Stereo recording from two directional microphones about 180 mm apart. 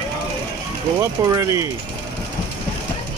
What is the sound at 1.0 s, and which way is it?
Speech, 15° right (ahead or behind).